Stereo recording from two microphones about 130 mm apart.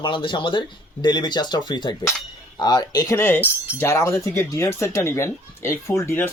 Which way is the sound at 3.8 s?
20° left (ahead or behind).